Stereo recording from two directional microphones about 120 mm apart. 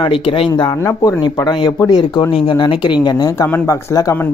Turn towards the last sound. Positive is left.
turn(degrees=25)  # may be behind; listen again after turning